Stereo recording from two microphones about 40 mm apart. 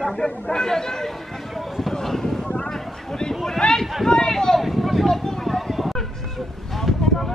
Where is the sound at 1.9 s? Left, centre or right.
Centre.